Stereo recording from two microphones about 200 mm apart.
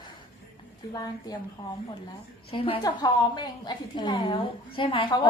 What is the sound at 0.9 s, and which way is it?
A woman's voice, 20° left (ahead or behind).